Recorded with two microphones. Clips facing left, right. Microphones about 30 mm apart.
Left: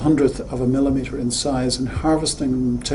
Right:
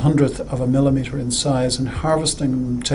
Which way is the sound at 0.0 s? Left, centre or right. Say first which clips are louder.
Left 1 dB; right.